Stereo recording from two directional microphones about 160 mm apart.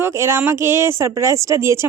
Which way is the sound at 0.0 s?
15° right (ahead or behind).